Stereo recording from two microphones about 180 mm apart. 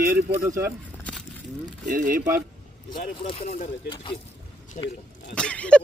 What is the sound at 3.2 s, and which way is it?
Speech, 30° left (ahead or behind).